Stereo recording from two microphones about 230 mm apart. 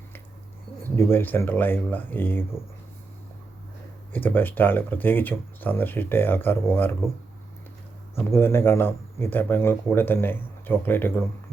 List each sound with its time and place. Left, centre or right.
0.9 s speech: centre
4.1 s speech: centre
8.1 s speech: centre